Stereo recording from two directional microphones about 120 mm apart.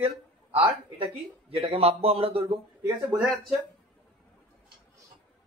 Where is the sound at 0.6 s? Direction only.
50° right (ahead or behind).